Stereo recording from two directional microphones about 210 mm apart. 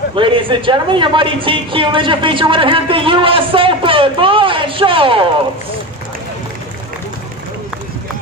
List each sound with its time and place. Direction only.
0.1 s a woman's voice: 25° right (ahead or behind)